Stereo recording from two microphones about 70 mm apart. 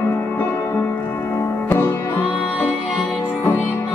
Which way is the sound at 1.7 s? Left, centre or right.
Left.